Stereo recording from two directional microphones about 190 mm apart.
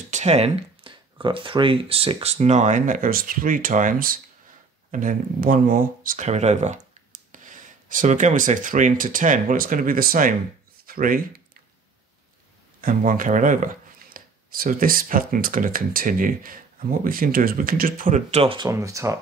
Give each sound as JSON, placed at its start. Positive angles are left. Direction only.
{"t": 0.1, "sound": "speech", "side_deg": -35}
{"t": 12.8, "sound": "speech", "side_deg": -45}
{"t": 18.7, "sound": "speech", "side_deg": -15}